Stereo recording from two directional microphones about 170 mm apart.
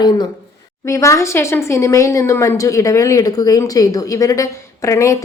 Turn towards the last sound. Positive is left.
turn(degrees=20)  # may be behind; listen again after turning